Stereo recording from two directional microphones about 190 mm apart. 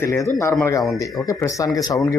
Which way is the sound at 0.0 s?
15° left (ahead or behind).